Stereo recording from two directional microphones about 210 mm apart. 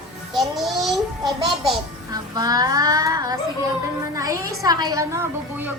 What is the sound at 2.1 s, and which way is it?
A woman's voice, 20° right (ahead or behind).